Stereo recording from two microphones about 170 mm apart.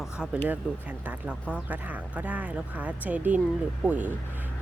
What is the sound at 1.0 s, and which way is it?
Speech, 5° right (ahead or behind).